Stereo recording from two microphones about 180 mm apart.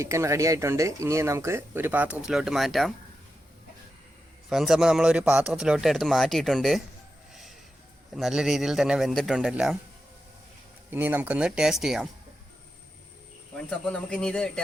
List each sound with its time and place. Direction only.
0.0 s speech: 15° right (ahead or behind); by 2.9 s centre (ahead or behind)
4.4 s speech: centre (ahead or behind)
8.1 s speech: centre (ahead or behind)
10.9 s speech: 10° right (ahead or behind)
13.7 s speech: 5° left (ahead or behind)